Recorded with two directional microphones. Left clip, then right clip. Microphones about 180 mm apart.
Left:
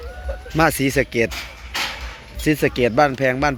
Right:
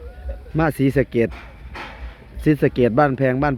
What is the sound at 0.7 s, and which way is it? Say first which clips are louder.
Speech: even; 25° right (ahead or behind).